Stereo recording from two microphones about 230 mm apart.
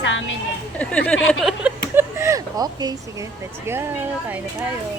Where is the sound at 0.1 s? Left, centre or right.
Left.